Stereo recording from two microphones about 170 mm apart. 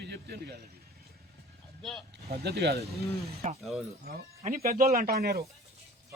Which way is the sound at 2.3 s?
70° right (ahead or behind).